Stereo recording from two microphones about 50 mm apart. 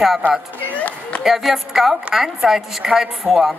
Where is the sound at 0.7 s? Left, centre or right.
Left.